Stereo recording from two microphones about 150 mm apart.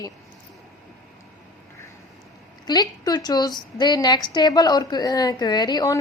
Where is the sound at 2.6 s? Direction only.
25° left (ahead or behind).